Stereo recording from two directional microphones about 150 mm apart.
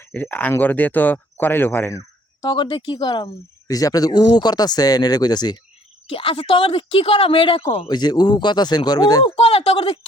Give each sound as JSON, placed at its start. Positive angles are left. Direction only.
{"t": 0.0, "sound": "speech", "side_deg": 10}
{"t": 2.4, "sound": "speech", "side_deg": 30}
{"t": 6.1, "sound": "speech", "side_deg": 40}
{"t": 7.9, "sound": "speech", "side_deg": 30}
{"t": 9.3, "sound": "speech", "side_deg": 40}